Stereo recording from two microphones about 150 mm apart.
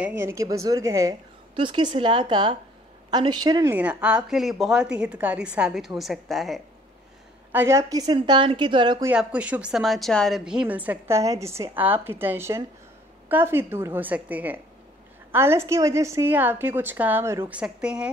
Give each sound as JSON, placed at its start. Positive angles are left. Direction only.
{"t": 0.0, "sound": "a woman's voice", "side_deg": -20}
{"t": 1.5, "sound": "a woman's voice", "side_deg": -35}
{"t": 3.6, "sound": "a woman's voice", "side_deg": -10}
{"t": 7.5, "sound": "a woman's voice", "side_deg": -20}
{"t": 8.2, "sound": "a woman's voice", "side_deg": -35}
{"t": 9.0, "sound": "a woman's voice", "side_deg": -10}